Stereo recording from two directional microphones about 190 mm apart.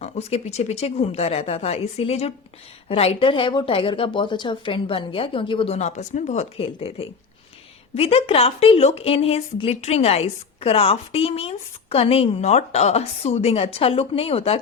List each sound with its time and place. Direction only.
0.0 s a woman's voice: 35° left (ahead or behind)
7.9 s a woman's voice: 30° left (ahead or behind)